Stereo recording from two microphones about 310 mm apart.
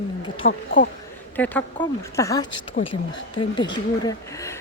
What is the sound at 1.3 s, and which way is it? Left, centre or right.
Speech, centre.